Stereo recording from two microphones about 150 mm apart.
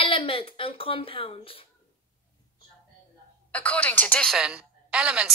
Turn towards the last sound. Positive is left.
turn(degrees=-5)  # may be behind; listen again after turning